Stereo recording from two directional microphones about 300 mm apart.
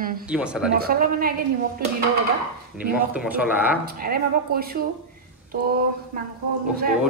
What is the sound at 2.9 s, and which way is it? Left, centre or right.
Speech, centre.